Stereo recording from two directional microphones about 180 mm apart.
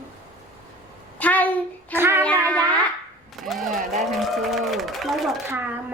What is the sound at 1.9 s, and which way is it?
Speech, 10° right (ahead or behind).